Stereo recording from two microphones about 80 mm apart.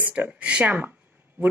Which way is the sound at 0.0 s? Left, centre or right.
Centre.